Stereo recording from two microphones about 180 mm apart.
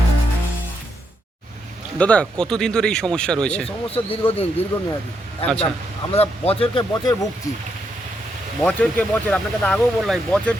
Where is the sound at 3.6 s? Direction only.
30° left (ahead or behind).